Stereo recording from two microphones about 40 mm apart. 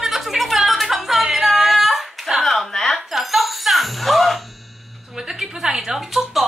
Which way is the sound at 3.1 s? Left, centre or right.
Centre.